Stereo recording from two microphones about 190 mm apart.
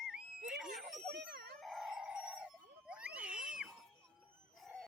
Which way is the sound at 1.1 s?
60° right (ahead or behind).